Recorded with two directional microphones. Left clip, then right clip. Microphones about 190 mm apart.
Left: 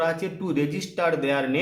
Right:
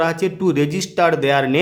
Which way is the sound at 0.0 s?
45° right (ahead or behind).